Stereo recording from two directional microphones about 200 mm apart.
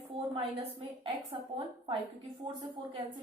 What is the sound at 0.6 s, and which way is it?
A woman's voice, 25° right (ahead or behind).